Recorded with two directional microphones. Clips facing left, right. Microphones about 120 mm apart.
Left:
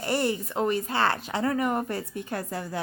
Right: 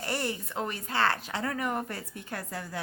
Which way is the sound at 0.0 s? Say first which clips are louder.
Left 6 dB; 20° left (ahead or behind).